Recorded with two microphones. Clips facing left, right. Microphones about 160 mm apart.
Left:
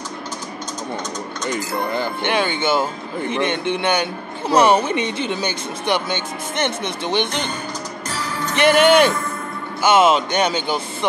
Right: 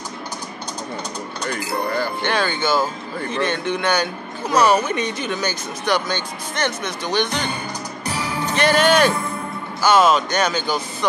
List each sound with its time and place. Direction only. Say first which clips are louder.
1.5 s speech: even; 20° left (ahead or behind)
8.1 s music: right 2 dB; 15° right (ahead or behind)
8.5 s speech: left 3 dB; 20° left (ahead or behind)